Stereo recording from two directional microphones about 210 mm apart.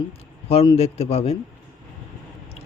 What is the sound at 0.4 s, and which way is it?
Speech, 25° left (ahead or behind).